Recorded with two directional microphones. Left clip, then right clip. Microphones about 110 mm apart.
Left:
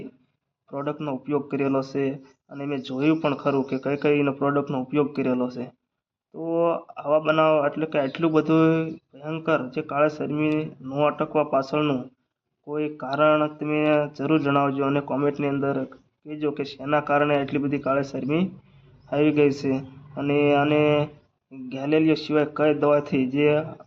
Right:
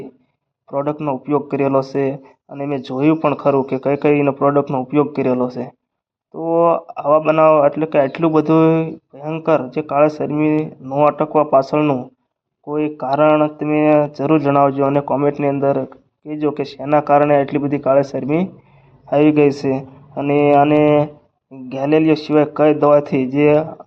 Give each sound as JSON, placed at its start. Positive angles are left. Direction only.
{"t": 0.7, "sound": "speech", "side_deg": -35}
{"t": 1.2, "sound": "a man's voice", "side_deg": -45}
{"t": 10.2, "sound": "speech", "side_deg": -35}
{"t": 11.3, "sound": "a man's voice", "side_deg": -45}
{"t": 11.8, "sound": "a man's voice", "side_deg": -30}
{"t": 13.2, "sound": "mantra", "side_deg": -30}
{"t": 13.6, "sound": "a man's voice", "side_deg": -40}